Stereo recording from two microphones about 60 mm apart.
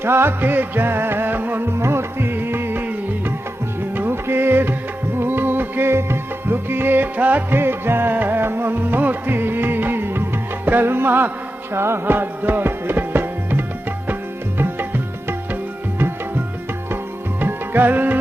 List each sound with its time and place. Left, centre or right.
0.0 s music: right
7.6 s music: right
16.0 s tabla: right
17.4 s music: right